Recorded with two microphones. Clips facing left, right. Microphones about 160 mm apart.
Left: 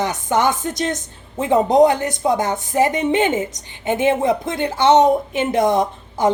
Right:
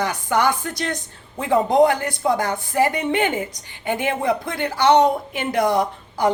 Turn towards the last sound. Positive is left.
turn(degrees=20)  # may be behind; listen again after turning